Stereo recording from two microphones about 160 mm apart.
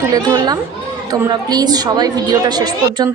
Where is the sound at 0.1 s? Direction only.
25° right (ahead or behind).